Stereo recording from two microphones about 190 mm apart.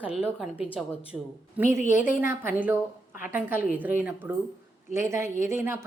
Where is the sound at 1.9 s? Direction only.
45° left (ahead or behind).